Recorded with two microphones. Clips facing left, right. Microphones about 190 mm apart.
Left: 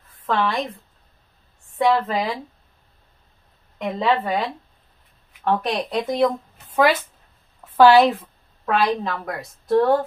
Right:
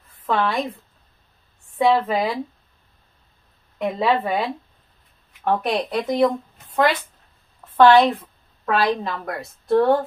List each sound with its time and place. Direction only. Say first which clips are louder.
0.4 s a woman's voice: even; centre (ahead or behind)
1.8 s speech: right 1 dB; 5° right (ahead or behind)
3.7 s a woman's voice: right 1 dB; 5° right (ahead or behind)